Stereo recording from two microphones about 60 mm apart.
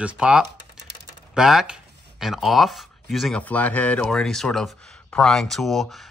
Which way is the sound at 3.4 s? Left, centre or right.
Left.